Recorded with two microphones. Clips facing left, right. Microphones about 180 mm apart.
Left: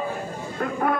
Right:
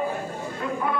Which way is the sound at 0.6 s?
50° left (ahead or behind).